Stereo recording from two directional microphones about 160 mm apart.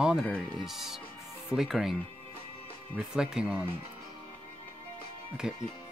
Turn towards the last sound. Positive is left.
turn(degrees=-5)  # may be behind; listen again after turning